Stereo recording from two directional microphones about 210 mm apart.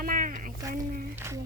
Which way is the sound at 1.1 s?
10° right (ahead or behind).